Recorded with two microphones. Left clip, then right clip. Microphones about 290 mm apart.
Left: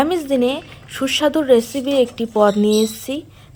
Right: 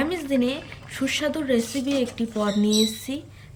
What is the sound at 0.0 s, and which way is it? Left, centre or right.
A woman's voice, centre.